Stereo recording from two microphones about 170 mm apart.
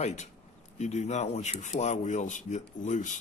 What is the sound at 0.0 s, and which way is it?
Speech, 40° left (ahead or behind).